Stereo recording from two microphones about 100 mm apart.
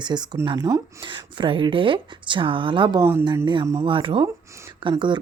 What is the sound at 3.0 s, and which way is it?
Speech, 25° right (ahead or behind).